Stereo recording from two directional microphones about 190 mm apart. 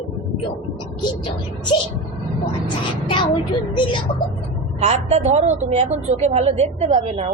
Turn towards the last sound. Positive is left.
turn(degrees=-35)  # may be behind; listen again after turning